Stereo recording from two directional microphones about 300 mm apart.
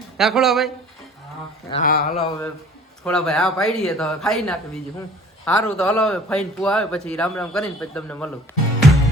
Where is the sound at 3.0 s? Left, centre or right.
Centre.